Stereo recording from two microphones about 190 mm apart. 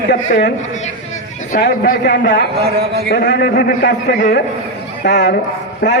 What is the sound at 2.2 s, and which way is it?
Speech, 65° left (ahead or behind).